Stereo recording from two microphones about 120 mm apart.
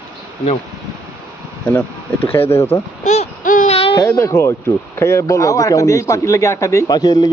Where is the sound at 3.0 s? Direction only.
75° left (ahead or behind).